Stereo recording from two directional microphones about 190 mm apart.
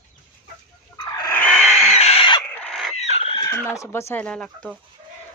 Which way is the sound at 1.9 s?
35° left (ahead or behind).